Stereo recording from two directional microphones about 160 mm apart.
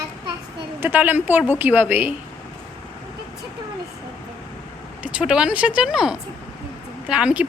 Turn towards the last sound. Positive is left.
turn(degrees=-5)  # may be behind; listen again after turning